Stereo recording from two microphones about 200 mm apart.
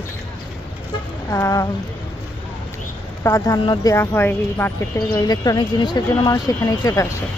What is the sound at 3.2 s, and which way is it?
Speech, 15° left (ahead or behind).